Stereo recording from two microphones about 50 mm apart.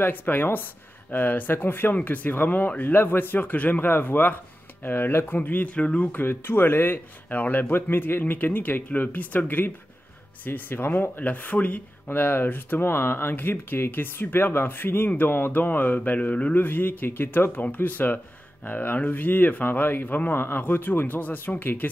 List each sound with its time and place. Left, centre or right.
0.0 s a man's voice: left
5.8 s speech: left
6.1 s speech: left
7.7 s a man's voice: left
12.1 s a man's voice: left
16.5 s a man's voice: left